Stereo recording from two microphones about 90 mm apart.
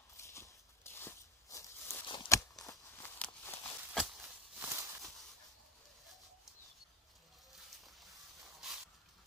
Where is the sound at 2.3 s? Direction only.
40° left (ahead or behind).